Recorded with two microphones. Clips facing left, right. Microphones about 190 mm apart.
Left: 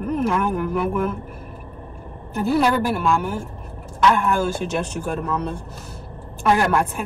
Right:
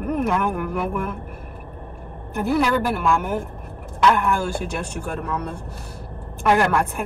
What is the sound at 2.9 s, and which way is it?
Speech, 60° right (ahead or behind).